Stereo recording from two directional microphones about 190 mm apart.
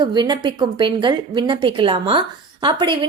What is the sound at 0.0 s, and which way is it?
A woman's voice, 25° right (ahead or behind).